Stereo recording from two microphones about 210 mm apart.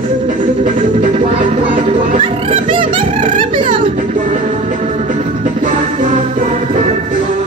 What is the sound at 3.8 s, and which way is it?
Music, 35° right (ahead or behind).